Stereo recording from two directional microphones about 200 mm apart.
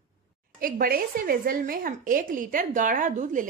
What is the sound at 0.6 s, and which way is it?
A woman's voice, 45° right (ahead or behind).